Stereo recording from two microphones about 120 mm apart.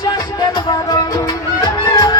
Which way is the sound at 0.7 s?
35° left (ahead or behind).